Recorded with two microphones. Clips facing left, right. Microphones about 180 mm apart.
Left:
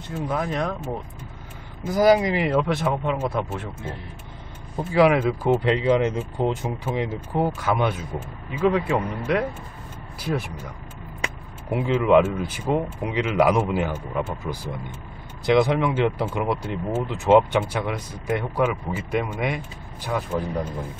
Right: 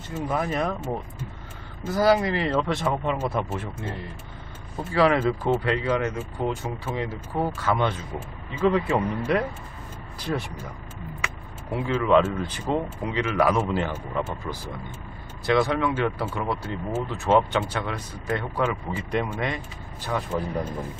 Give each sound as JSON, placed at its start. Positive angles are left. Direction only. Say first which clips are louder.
{"t": 0.1, "sound": "speech", "louder": "even", "side_deg": -5}
{"t": 1.9, "sound": "speech", "louder": "left 3 dB", "side_deg": 10}
{"t": 4.9, "sound": "speech", "louder": "left 3 dB", "side_deg": 10}
{"t": 5.6, "sound": "speech", "louder": "left 5 dB", "side_deg": 20}
{"t": 11.7, "sound": "speech", "louder": "left 3 dB", "side_deg": 15}